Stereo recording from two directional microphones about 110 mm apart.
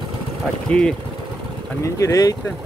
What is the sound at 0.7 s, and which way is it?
Speech, 10° left (ahead or behind).